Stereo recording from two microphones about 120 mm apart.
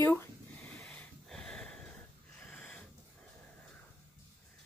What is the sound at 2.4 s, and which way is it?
Sniff, 5° left (ahead or behind).